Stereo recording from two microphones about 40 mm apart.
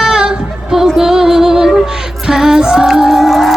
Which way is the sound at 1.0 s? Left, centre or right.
Centre.